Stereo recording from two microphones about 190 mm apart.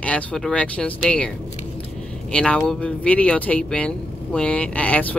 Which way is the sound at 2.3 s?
5° left (ahead or behind).